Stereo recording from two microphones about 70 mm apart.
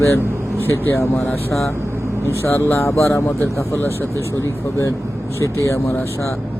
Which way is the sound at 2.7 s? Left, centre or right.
Left.